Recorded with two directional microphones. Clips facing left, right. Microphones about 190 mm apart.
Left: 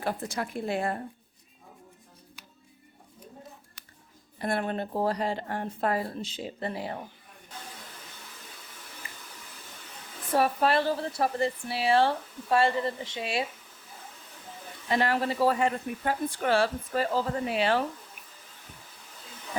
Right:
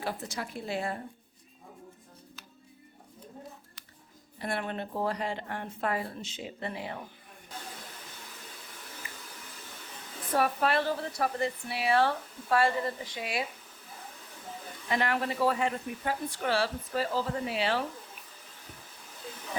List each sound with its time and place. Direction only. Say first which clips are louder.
0.0 s a woman's voice: left 4 dB; 55° left (ahead or behind)
4.4 s speech: left 4 dB; 45° left (ahead or behind)
10.3 s speech: left 3 dB; 30° left (ahead or behind)
14.8 s a woman's voice: left 3 dB; 35° left (ahead or behind); by 17.7 s 50° left (ahead or behind)